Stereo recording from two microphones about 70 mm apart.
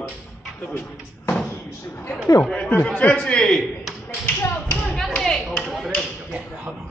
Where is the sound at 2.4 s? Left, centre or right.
Centre.